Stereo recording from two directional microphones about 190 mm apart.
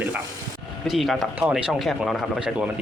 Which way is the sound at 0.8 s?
Centre (ahead or behind).